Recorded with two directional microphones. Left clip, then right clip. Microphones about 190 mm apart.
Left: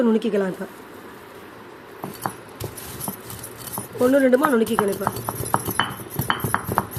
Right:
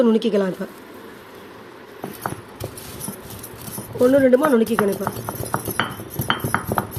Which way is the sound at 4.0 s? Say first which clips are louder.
Right 2 dB; 5° right (ahead or behind).